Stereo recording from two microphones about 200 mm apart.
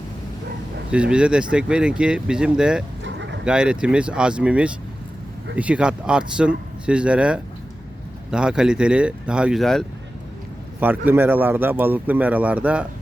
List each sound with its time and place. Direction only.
0.9 s speech: 5° right (ahead or behind)
3.0 s a sound: 65° right (ahead or behind)
3.4 s speech: 5° right (ahead or behind)
10.8 s speech: 10° right (ahead or behind)